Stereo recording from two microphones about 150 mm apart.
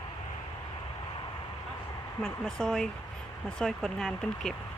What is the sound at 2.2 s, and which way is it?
Speech, 5° left (ahead or behind).